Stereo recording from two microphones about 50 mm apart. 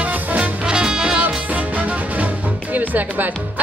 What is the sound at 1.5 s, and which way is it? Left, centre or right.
Music, right.